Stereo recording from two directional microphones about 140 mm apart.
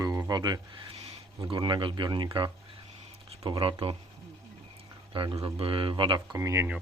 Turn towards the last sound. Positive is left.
turn(degrees=-20)  # may be behind; listen again after turning